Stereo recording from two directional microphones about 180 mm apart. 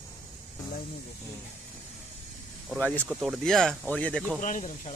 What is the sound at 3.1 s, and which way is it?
Speech, 10° right (ahead or behind).